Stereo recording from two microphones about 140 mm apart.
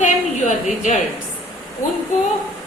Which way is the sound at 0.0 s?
65° left (ahead or behind).